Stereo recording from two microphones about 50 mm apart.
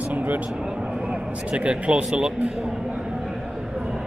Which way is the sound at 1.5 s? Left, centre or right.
Right.